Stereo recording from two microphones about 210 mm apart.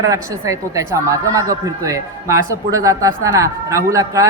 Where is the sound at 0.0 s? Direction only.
15° right (ahead or behind).